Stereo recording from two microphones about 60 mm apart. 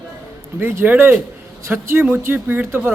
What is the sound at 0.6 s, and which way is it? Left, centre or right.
A man's voice, right.